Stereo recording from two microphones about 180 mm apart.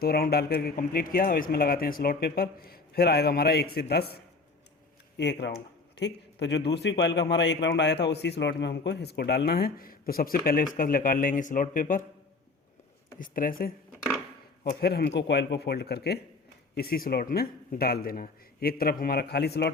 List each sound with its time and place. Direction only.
0.0 s a man's voice: 60° left (ahead or behind)
5.1 s a man's voice: 75° left (ahead or behind)
5.5 s a sound: 75° left (ahead or behind)
6.7 s a man's voice: 75° left (ahead or behind); by 12.0 s 50° left (ahead or behind)
13.1 s a man's voice: 50° left (ahead or behind)